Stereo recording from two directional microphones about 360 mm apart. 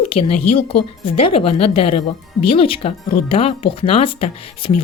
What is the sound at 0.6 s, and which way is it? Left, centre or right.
A woman's voice, centre.